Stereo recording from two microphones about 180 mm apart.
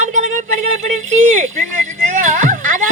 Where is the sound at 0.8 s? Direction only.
40° right (ahead or behind).